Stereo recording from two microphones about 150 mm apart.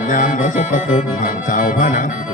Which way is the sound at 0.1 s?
60° left (ahead or behind).